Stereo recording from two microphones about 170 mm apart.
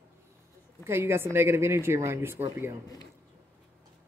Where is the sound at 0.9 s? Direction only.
15° right (ahead or behind).